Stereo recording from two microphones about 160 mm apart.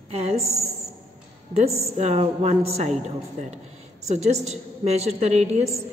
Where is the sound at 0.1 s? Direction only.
40° right (ahead or behind).